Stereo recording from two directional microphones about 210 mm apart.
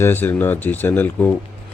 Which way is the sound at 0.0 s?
10° left (ahead or behind).